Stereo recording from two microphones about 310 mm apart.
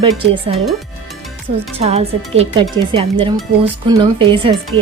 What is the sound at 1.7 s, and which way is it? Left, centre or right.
A woman's voice, centre.